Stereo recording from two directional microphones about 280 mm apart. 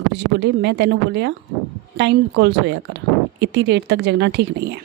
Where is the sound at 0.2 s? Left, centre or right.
Right.